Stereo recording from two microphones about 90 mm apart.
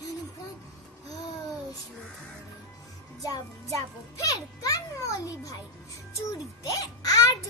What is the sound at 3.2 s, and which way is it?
A child's voice, 40° left (ahead or behind).